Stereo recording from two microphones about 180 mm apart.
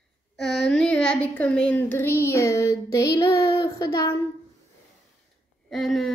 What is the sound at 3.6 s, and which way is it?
Child singing, 20° left (ahead or behind).